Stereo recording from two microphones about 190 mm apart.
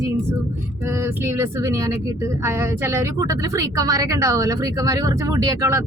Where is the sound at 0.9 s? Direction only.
15° right (ahead or behind).